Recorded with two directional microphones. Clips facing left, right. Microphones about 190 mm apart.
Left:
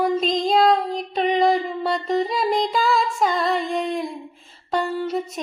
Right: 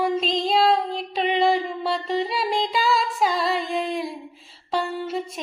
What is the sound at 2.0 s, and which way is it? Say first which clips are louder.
Music: left 5 dB; 45° left (ahead or behind).